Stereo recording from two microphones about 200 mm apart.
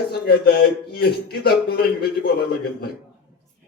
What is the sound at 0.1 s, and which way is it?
Speech, 50° left (ahead or behind).